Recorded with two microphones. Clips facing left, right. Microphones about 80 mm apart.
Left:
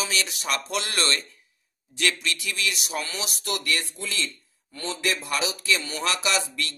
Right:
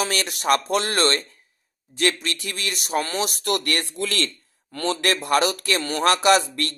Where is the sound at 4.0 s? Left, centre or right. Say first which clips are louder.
Right 6 dB; right.